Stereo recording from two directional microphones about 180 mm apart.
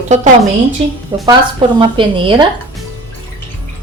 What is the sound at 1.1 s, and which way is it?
Speech, 25° right (ahead or behind).